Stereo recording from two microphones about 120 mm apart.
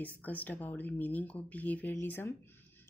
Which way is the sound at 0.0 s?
15° left (ahead or behind).